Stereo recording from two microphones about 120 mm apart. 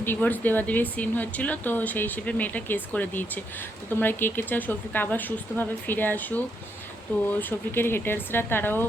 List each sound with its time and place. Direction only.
0.0 s speech: 15° left (ahead or behind)